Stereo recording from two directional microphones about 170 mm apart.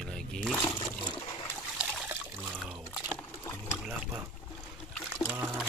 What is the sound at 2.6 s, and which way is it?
Liquid, centre (ahead or behind).